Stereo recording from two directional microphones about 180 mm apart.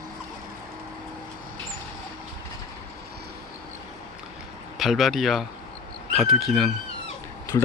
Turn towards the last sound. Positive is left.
turn(degrees=25)  # may be behind; listen again after turning